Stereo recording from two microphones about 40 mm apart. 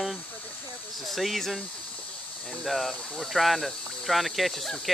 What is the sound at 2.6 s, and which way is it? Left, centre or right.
Speech, centre.